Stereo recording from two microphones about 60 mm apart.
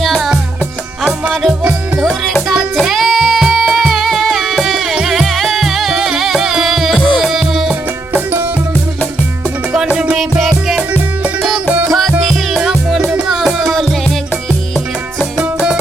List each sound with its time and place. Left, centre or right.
0.0 s music: centre
1.3 s music: centre
2.8 s music: centre
8.1 s music: right
10.2 s music: centre
11.9 s music: centre
15.4 s music: centre